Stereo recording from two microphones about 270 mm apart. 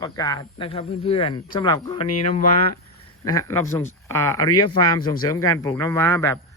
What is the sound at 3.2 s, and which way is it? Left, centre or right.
Speech, centre.